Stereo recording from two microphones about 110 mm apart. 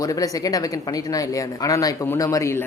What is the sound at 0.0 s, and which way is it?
Speech, 35° left (ahead or behind).